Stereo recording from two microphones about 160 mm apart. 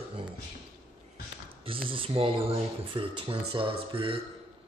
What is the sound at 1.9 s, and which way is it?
Speech, 35° right (ahead or behind).